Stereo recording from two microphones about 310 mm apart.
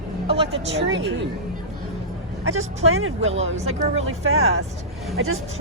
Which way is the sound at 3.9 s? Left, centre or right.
Right.